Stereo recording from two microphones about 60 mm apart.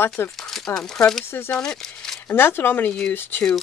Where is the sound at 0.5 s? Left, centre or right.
Centre.